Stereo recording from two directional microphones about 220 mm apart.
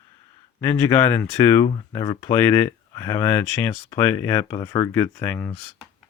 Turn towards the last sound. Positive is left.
turn(degrees=10)  # may be behind; listen again after turning